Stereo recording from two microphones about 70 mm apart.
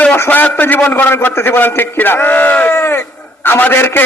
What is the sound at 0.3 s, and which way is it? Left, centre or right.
A man's voice, left.